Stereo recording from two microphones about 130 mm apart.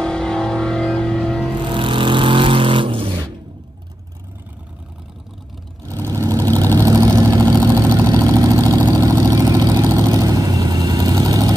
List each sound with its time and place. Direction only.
0.0 s music: 5° left (ahead or behind)
1.7 s vehicle: 40° right (ahead or behind)
6.1 s vehicle: 25° right (ahead or behind)